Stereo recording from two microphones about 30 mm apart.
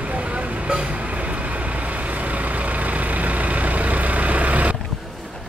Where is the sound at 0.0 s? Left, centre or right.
Right.